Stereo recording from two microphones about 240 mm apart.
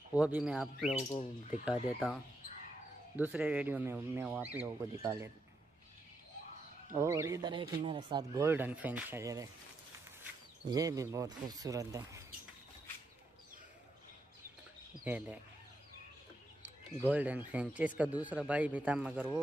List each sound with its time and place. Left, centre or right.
0.1 s speech: centre
0.9 s speech: left
1.7 s speech: centre
3.2 s speech: centre
7.0 s speech: centre
10.7 s speech: centre
15.0 s speech: centre
17.0 s speech: centre